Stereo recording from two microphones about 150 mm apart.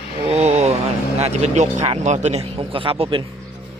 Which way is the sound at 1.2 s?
50° right (ahead or behind).